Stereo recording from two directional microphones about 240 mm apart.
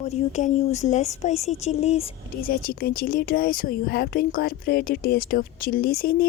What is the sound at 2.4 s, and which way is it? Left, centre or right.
A woman's voice, left.